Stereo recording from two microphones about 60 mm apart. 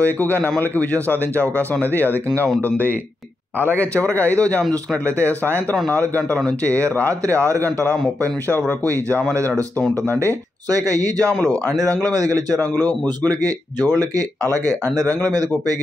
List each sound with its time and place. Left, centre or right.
0.0 s speech: left
3.7 s speech: left
5.2 s speech: right
5.9 s speech: left
7.3 s a man's voice: right
8.5 s speech: left
10.7 s speech: right
12.8 s speech: left
13.9 s speech: right